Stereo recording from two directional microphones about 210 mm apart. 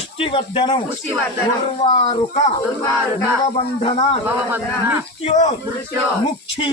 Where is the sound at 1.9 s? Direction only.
25° left (ahead or behind).